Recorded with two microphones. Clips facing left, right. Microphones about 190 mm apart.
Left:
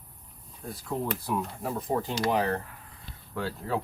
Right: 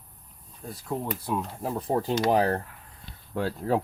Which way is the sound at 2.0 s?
40° right (ahead or behind).